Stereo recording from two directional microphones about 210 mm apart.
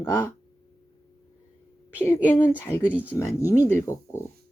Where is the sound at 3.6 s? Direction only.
10° left (ahead or behind).